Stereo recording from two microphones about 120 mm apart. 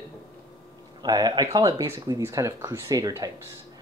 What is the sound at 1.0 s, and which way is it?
Speech, 35° right (ahead or behind).